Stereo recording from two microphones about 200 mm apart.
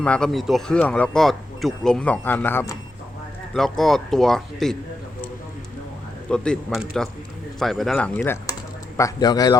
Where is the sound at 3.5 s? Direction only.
Centre (ahead or behind).